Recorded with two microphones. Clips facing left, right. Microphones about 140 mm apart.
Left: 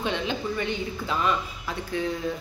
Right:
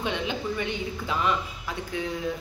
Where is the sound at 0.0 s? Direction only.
15° right (ahead or behind).